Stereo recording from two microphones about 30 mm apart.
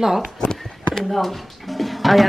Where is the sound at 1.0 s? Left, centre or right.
Centre.